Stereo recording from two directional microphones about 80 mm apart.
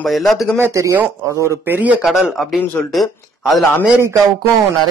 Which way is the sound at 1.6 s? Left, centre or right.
Right.